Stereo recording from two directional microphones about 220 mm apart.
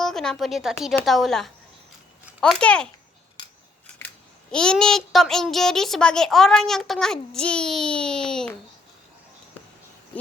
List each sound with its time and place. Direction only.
0.0 s a child's voice: centre (ahead or behind)
3.4 s scissors: 20° left (ahead or behind)
4.5 s a child's voice: 5° left (ahead or behind)